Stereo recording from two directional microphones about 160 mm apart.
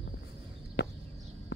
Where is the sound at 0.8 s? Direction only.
90° left.